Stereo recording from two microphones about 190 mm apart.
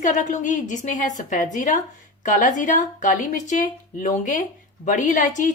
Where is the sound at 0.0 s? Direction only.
40° left (ahead or behind).